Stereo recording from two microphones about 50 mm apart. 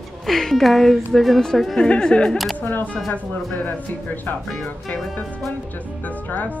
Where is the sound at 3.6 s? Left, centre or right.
Left.